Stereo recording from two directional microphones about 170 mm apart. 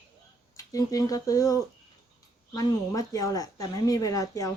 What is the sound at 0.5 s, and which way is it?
A woman's voice, 20° left (ahead or behind).